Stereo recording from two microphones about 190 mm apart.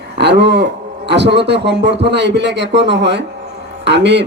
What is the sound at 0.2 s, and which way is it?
A man's voice, 60° right (ahead or behind).